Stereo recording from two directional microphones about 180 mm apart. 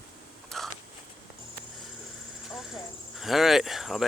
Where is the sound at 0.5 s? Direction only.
Centre (ahead or behind).